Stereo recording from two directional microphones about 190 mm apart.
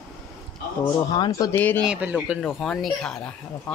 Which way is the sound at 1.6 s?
10° left (ahead or behind).